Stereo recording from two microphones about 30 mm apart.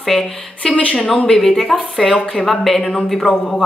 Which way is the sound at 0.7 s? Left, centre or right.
Left.